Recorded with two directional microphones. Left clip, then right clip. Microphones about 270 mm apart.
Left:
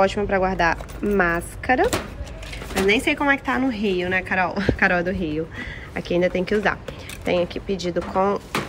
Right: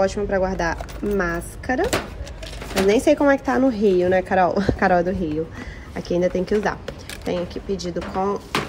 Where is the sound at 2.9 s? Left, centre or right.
Centre.